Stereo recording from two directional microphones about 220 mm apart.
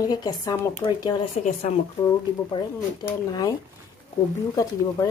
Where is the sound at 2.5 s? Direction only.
15° left (ahead or behind).